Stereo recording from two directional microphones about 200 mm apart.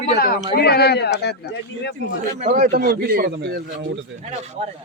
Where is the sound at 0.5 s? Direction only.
55° left (ahead or behind).